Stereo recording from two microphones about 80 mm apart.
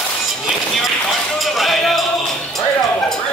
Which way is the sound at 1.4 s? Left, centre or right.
Centre.